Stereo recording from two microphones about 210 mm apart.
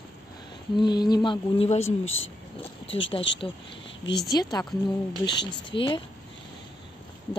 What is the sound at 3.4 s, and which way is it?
Speech, 25° left (ahead or behind).